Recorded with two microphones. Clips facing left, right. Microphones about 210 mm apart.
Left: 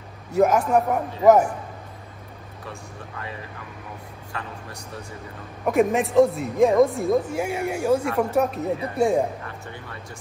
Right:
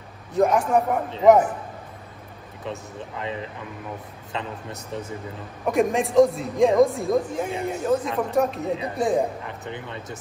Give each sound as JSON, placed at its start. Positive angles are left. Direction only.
{"t": 0.3, "sound": "a man's voice", "side_deg": 5}
{"t": 2.6, "sound": "speech", "side_deg": -20}
{"t": 5.7, "sound": "speech", "side_deg": 0}
{"t": 8.7, "sound": "speech", "side_deg": -20}